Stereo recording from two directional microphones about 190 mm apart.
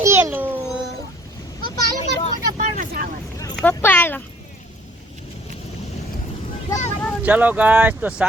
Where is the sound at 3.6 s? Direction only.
10° left (ahead or behind).